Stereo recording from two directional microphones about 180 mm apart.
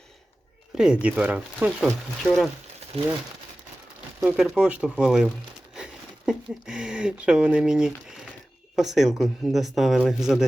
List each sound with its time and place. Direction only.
1.0 s speech: 5° right (ahead or behind)
4.2 s speech: 5° right (ahead or behind)